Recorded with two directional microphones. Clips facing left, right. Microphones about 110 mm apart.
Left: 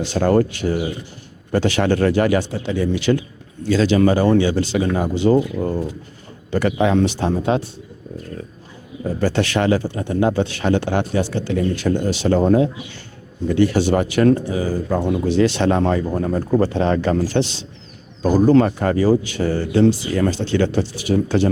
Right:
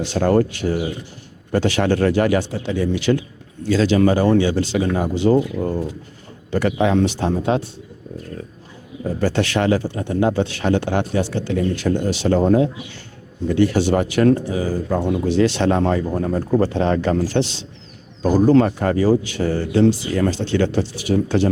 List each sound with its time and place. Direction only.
0.1 s speech: 15° left (ahead or behind)
9.2 s speech: 15° left (ahead or behind)